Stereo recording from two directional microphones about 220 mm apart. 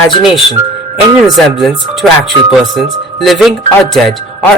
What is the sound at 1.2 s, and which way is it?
Speech, centre (ahead or behind).